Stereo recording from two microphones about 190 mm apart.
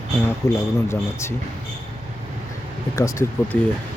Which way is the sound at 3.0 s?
15° left (ahead or behind).